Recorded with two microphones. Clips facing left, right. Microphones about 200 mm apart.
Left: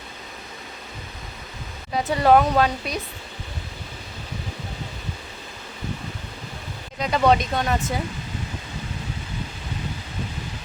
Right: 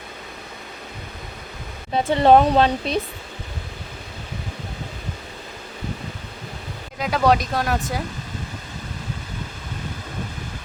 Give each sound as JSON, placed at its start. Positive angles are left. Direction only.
{"t": 1.9, "sound": "speech", "side_deg": -25}
{"t": 7.0, "sound": "speech", "side_deg": 0}